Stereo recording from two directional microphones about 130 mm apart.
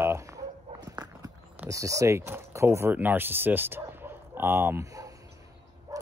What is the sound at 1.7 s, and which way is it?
Speech, 25° right (ahead or behind).